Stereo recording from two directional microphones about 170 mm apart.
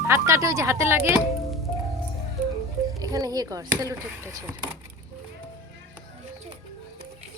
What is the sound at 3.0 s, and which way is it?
Speech, 20° right (ahead or behind).